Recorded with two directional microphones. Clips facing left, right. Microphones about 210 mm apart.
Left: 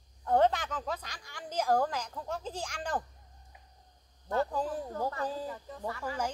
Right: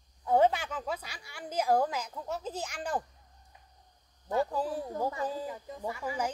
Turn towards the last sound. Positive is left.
turn(degrees=-10)  # may be behind; listen again after turning